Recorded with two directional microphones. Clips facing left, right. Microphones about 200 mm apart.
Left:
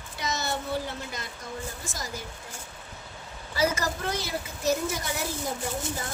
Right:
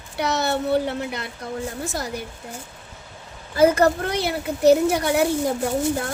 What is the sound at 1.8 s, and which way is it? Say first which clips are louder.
Speech: right 9 dB; 65° right (ahead or behind).